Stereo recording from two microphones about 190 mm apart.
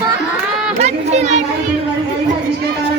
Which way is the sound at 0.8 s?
35° right (ahead or behind).